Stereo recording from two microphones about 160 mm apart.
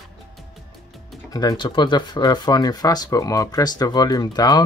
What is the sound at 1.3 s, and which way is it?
Speech, 25° left (ahead or behind).